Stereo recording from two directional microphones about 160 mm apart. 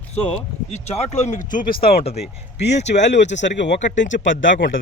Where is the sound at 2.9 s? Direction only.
90° left.